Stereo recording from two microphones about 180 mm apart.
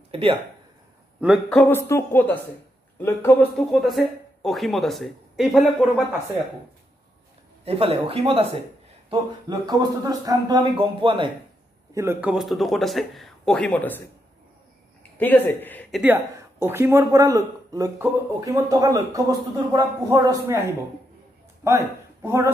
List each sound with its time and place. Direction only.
0.1 s speech: 30° right (ahead or behind)
1.5 s a woman's voice: 10° left (ahead or behind)
7.6 s speech: 30° right (ahead or behind)
9.1 s speech: 20° right (ahead or behind)
11.9 s speech: 15° right (ahead or behind); by 14.0 s 10° left (ahead or behind)
15.1 s a woman's voice: 10° left (ahead or behind)
16.0 s speech: 10° right (ahead or behind)
21.6 s speech: 15° right (ahead or behind)